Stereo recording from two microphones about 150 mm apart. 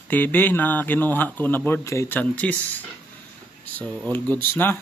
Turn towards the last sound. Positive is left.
turn(degrees=15)  # may be behind; listen again after turning